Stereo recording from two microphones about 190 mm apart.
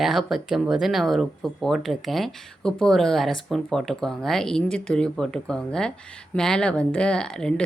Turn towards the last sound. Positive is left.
turn(degrees=5)  # may be behind; listen again after turning